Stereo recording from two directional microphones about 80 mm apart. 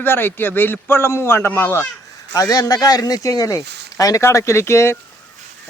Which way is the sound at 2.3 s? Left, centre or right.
Left.